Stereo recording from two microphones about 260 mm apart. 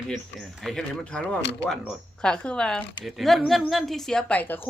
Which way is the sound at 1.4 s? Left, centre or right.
Left.